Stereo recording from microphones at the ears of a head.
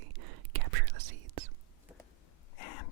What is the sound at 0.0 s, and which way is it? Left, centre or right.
Whispering, right.